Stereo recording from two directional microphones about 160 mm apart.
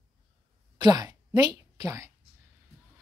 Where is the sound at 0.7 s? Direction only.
25° right (ahead or behind).